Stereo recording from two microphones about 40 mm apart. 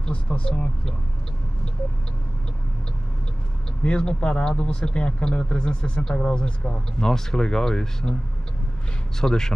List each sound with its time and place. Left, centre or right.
0.0 s speech: left
3.8 s speech: left
7.1 s speech: centre
9.2 s speech: centre